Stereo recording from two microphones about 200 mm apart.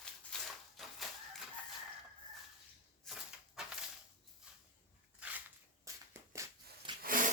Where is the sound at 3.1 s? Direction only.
Centre (ahead or behind).